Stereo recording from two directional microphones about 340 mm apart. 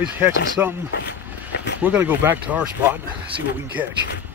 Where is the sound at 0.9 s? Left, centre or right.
Left.